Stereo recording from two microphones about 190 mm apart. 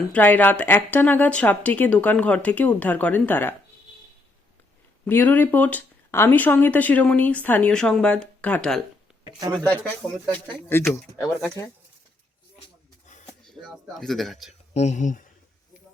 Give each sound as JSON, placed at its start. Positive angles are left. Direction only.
{"t": 0.1, "sound": "speech", "side_deg": 10}
{"t": 5.0, "sound": "speech", "side_deg": 10}
{"t": 13.6, "sound": "speech", "side_deg": 0}
{"t": 14.7, "sound": "speech", "side_deg": 35}